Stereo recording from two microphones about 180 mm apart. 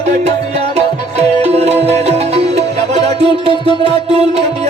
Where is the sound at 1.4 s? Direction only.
35° right (ahead or behind).